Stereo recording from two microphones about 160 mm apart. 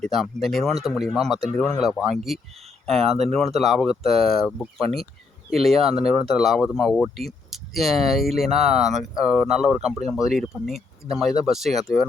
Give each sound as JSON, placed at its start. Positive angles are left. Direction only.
{"t": 0.0, "sound": "speech", "side_deg": 0}
{"t": 3.1, "sound": "speech", "side_deg": -40}
{"t": 3.3, "sound": "speech", "side_deg": 0}